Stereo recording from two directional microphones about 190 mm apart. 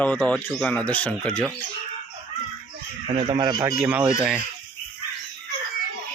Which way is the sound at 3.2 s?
20° right (ahead or behind).